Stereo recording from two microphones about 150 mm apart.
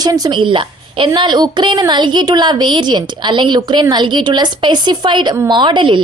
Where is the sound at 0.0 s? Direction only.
25° right (ahead or behind).